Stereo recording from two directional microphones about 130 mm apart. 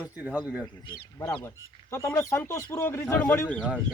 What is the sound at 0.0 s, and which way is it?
Speech, 10° right (ahead or behind).